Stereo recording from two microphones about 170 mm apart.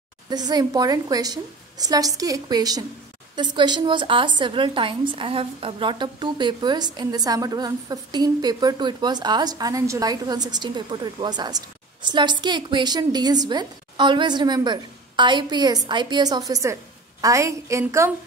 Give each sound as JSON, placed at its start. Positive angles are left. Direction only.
{"t": 0.3, "sound": "a woman's voice", "side_deg": -25}